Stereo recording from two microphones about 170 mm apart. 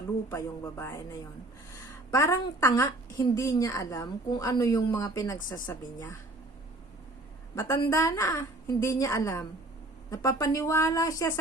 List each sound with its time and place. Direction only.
0.3 s a woman's voice: 15° left (ahead or behind)
7.5 s a woman's voice: 15° left (ahead or behind)